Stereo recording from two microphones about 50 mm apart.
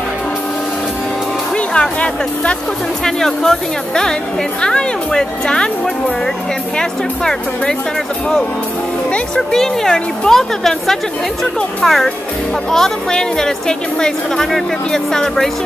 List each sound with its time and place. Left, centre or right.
1.7 s speech: left
3.1 s speech: centre
9.3 s speech: centre